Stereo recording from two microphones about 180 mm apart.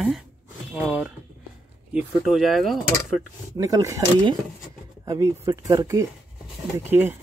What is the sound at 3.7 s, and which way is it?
Speech, 15° right (ahead or behind).